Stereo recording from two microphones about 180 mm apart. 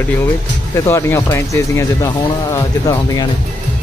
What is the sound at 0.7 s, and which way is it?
Speech, 15° left (ahead or behind).